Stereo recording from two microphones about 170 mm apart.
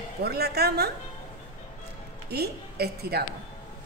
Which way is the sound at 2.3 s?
70° right (ahead or behind).